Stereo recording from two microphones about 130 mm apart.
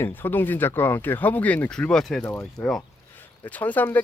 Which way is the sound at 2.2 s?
15° left (ahead or behind).